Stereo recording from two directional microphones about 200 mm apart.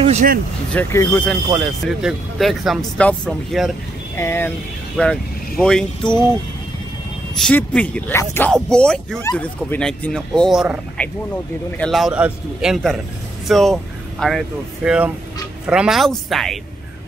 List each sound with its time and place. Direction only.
0.0 s speech: 40° right (ahead or behind)
0.7 s speech: 10° left (ahead or behind)
4.2 s speech: 10° left (ahead or behind)
7.3 s speech: 5° left (ahead or behind)